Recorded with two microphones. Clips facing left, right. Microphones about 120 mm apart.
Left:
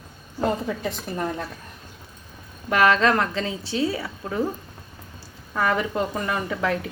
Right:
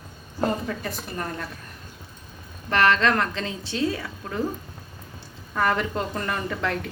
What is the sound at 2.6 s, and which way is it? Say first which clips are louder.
A woman's voice: left 2 dB; 10° left (ahead or behind).